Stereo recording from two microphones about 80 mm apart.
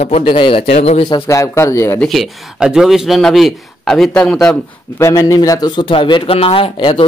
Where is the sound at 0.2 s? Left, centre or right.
Left.